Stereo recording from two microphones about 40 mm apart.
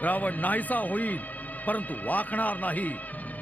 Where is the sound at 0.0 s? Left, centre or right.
Left.